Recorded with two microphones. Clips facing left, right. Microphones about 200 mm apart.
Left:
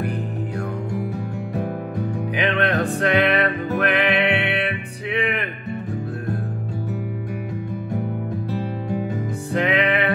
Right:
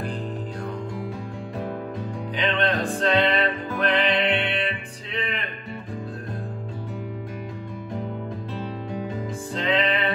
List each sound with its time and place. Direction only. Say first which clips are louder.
1.6 s music: left 3 dB; 65° left (ahead or behind)
9.1 s music: left 5 dB; 70° left (ahead or behind)